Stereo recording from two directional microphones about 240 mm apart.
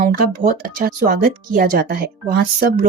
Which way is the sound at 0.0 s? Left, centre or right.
Right.